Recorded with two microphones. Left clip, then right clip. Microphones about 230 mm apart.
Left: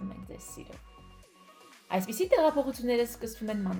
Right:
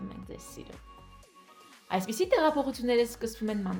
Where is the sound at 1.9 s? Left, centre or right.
Right.